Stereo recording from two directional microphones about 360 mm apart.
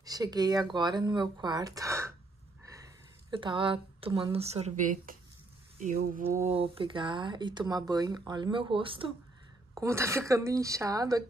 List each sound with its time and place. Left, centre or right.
0.0 s speech: centre